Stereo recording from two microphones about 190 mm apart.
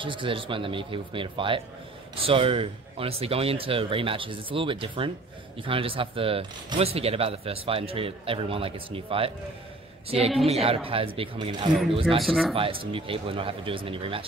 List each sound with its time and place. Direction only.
0.0 s speech: 25° right (ahead or behind)
10.4 s speech: 30° right (ahead or behind)
12.2 s speech: centre (ahead or behind)
12.5 s speech: 30° right (ahead or behind)